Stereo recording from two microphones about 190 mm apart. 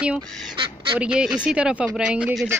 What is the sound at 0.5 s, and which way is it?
Duck, 25° right (ahead or behind).